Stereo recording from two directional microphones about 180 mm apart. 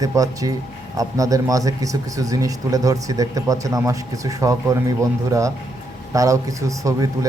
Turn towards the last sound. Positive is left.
turn(degrees=-20)  # may be behind; listen again after turning